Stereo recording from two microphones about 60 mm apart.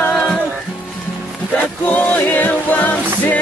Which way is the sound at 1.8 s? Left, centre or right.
Left.